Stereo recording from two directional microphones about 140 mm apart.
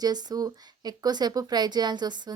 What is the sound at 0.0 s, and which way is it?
Speech, 30° right (ahead or behind).